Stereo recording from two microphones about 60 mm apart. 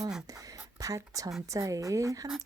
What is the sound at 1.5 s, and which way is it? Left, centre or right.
Speech, right.